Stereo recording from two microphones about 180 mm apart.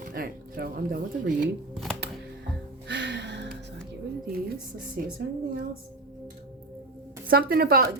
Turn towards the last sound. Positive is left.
turn(degrees=-55)  # may be behind; listen again after turning